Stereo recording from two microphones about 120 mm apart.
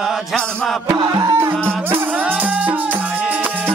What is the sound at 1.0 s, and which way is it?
Music, 30° right (ahead or behind).